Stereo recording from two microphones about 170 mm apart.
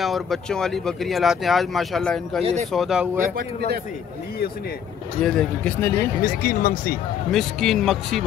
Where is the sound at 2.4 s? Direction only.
40° right (ahead or behind).